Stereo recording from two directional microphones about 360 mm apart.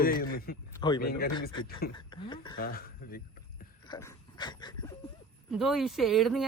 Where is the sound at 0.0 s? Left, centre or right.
Left.